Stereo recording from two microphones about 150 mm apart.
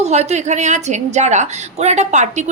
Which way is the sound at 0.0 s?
50° right (ahead or behind).